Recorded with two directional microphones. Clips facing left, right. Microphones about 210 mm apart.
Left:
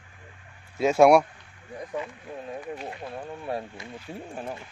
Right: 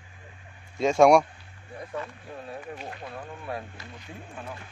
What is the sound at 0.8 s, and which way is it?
Speech, 5° left (ahead or behind).